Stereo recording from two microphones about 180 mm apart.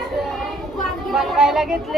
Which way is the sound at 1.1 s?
Centre (ahead or behind).